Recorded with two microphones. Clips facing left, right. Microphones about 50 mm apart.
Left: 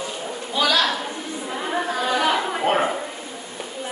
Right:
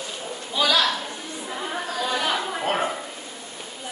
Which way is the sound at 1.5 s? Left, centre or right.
Left.